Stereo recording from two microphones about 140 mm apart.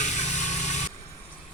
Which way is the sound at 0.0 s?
55° left (ahead or behind).